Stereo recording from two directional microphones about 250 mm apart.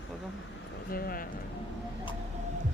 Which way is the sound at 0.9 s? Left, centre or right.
Left.